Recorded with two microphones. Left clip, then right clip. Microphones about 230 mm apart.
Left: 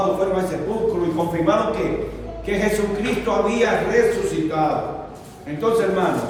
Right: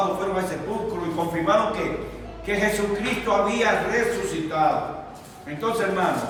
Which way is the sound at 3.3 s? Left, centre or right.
Centre.